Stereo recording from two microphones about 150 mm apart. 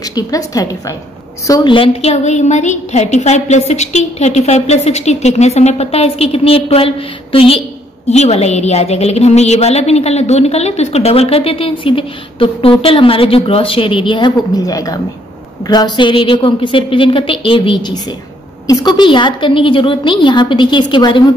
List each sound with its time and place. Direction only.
0.1 s a woman's voice: 25° left (ahead or behind)